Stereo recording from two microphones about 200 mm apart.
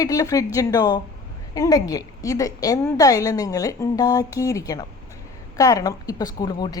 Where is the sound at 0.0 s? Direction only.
15° left (ahead or behind).